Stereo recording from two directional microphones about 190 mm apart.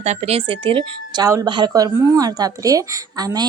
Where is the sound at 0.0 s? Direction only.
35° right (ahead or behind).